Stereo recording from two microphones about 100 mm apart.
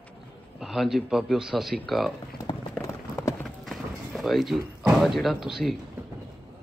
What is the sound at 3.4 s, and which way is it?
Clip-clop, centre (ahead or behind).